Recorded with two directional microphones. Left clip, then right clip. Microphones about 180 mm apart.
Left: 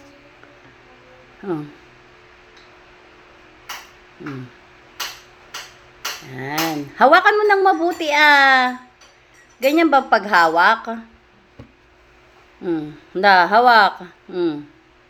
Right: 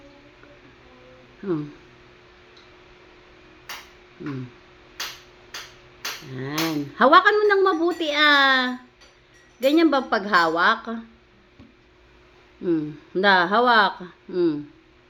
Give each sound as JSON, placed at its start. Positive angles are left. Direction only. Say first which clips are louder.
{"t": 6.3, "sound": "speech", "louder": "left 4 dB", "side_deg": -25}
{"t": 12.6, "sound": "speech", "louder": "even", "side_deg": -30}